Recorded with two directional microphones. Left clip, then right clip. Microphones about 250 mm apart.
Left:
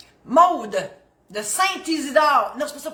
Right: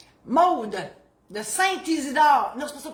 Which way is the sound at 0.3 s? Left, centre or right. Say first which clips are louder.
Left 4 dB; centre.